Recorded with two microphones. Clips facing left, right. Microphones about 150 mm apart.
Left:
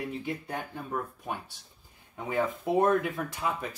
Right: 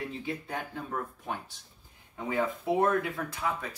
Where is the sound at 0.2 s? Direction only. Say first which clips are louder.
Left 1 dB; 15° left (ahead or behind).